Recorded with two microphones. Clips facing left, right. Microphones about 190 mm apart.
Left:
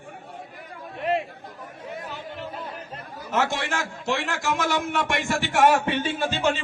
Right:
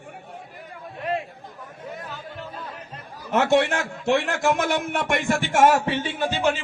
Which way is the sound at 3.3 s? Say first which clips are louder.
Right 6 dB; 60° right (ahead or behind).